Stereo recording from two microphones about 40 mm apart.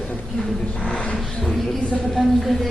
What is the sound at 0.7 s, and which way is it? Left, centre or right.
Vehicle, left.